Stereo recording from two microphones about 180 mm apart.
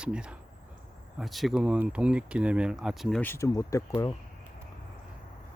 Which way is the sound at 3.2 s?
15° left (ahead or behind).